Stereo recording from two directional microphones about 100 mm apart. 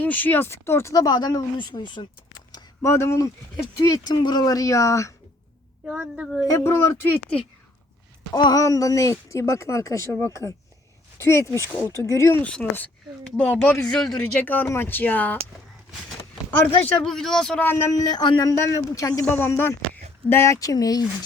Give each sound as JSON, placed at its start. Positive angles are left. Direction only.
{"t": 0.0, "sound": "speech", "side_deg": 15}
{"t": 2.8, "sound": "a woman's voice", "side_deg": 30}
{"t": 5.8, "sound": "a woman's voice", "side_deg": -10}
{"t": 6.5, "sound": "speech", "side_deg": 25}
{"t": 7.3, "sound": "speech", "side_deg": 10}
{"t": 8.3, "sound": "a woman's voice", "side_deg": 45}
{"t": 12.4, "sound": "speech", "side_deg": 15}
{"t": 14.2, "sound": "speech", "side_deg": 20}
{"t": 16.5, "sound": "speech", "side_deg": 5}
{"t": 17.6, "sound": "speech", "side_deg": 20}
{"t": 17.9, "sound": "a woman's voice", "side_deg": 45}
{"t": 18.5, "sound": "a woman's voice", "side_deg": 30}
{"t": 19.4, "sound": "a woman's voice", "side_deg": 20}